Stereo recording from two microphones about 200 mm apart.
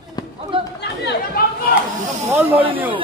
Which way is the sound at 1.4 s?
45° left (ahead or behind).